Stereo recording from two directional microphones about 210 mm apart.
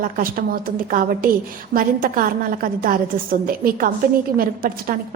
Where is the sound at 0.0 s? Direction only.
40° right (ahead or behind).